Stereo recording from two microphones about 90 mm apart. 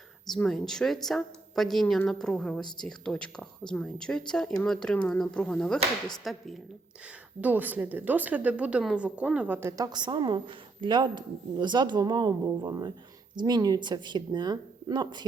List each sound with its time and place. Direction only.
0.4 s a woman's voice: 5° left (ahead or behind)
7.4 s a woman's voice: 20° right (ahead or behind)
9.5 s a woman's voice: 30° right (ahead or behind)
9.7 s a woman's voice: 40° right (ahead or behind)
10.0 s a woman's voice: 60° right (ahead or behind)